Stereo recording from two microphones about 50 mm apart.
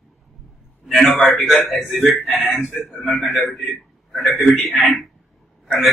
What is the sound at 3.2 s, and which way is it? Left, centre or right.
Speech, left.